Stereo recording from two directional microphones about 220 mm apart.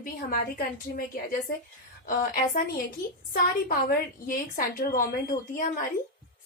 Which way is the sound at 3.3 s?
40° left (ahead or behind).